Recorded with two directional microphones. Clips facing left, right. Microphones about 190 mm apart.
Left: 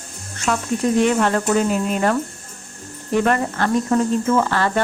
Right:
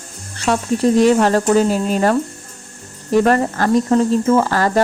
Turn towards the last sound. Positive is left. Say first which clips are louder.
# right 4 dB
turn(degrees=-40)  # may be behind; listen again after turning